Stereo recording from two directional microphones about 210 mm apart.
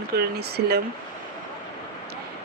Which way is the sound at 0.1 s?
50° right (ahead or behind).